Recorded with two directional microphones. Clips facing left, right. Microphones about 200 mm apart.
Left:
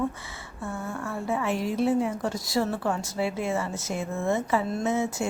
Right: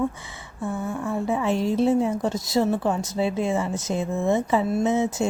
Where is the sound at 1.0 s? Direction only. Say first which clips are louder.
Right 4 dB; 20° right (ahead or behind).